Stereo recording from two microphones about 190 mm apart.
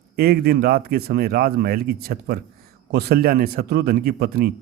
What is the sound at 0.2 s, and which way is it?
A man's voice, 55° right (ahead or behind).